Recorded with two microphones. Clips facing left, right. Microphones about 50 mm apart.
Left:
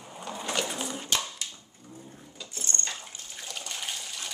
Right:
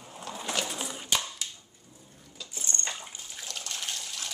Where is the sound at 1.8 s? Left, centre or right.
Left.